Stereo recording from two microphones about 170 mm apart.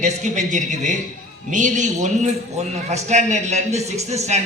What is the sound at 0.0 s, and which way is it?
A man's voice, 45° right (ahead or behind).